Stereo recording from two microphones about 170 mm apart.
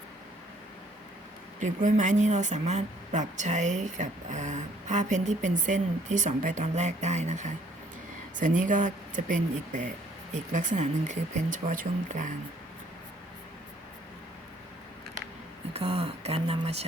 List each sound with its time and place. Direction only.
1.5 s speech: 50° right (ahead or behind)
15.7 s speech: 35° right (ahead or behind)